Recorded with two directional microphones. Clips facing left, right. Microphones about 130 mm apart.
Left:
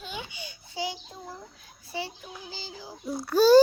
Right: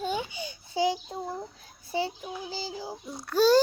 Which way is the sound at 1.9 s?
25° right (ahead or behind).